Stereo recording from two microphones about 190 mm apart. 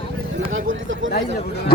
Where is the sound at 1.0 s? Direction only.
90° right.